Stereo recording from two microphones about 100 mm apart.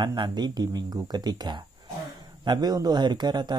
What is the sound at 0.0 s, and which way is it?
Speech, 50° right (ahead or behind).